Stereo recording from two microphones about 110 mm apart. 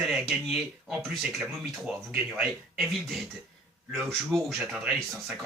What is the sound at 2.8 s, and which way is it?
Speech, centre (ahead or behind).